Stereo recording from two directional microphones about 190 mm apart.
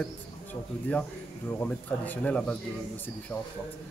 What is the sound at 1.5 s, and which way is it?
Speech, 10° left (ahead or behind).